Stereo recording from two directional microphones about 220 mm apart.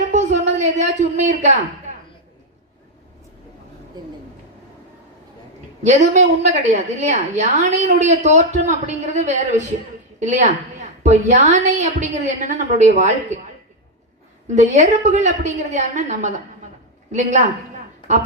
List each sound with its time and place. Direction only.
0.1 s a sound: 35° right (ahead or behind)
5.8 s a woman's voice: 30° right (ahead or behind)
14.4 s a woman's voice: 30° right (ahead or behind)